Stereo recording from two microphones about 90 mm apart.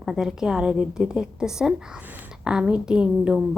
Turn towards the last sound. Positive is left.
turn(degrees=-10)  # may be behind; listen again after turning